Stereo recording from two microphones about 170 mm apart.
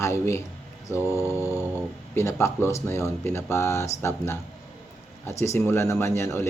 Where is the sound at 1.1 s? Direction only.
10° right (ahead or behind).